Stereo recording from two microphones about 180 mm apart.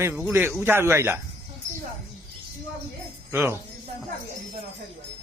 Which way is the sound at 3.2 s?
10° right (ahead or behind).